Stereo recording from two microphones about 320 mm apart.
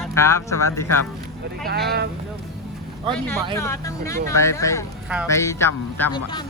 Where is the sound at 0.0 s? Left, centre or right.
Centre.